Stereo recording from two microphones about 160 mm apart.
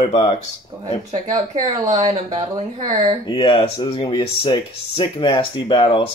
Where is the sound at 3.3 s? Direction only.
35° left (ahead or behind).